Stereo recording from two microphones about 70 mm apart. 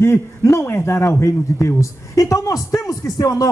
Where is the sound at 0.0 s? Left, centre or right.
Left.